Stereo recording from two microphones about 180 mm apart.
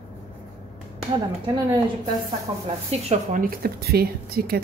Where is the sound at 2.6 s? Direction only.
35° right (ahead or behind).